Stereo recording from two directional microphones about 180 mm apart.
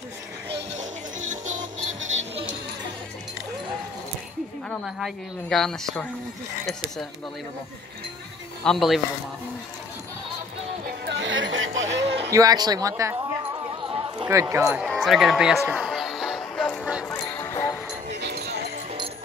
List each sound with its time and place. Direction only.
1.4 s music: 90° right
4.6 s speech: centre (ahead or behind)
8.6 s speech: centre (ahead or behind)
11.1 s music: 85° right
12.3 s a sound: 20° right (ahead or behind)
14.3 s speech: 15° right (ahead or behind)
14.9 s music: centre (ahead or behind)
17.0 s music: 15° left (ahead or behind)
18.1 s music: 70° right (ahead or behind)